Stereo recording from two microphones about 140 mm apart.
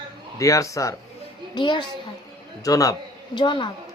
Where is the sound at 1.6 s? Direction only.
35° left (ahead or behind).